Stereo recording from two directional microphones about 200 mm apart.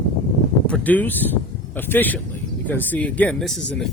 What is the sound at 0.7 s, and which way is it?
Speech, 10° left (ahead or behind).